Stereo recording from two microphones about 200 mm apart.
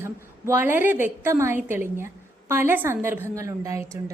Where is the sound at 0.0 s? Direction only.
10° right (ahead or behind).